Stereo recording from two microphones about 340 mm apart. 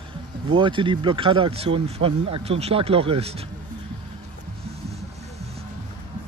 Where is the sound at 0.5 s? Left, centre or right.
Centre.